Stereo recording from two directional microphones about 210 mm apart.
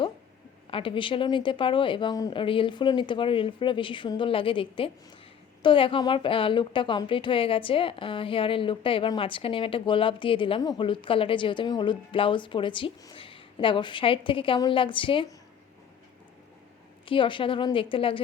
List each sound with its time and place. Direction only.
0.7 s a woman's voice: 25° left (ahead or behind)
17.1 s a woman's voice: 25° left (ahead or behind)